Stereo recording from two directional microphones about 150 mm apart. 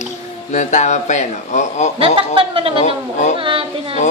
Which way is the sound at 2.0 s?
40° right (ahead or behind).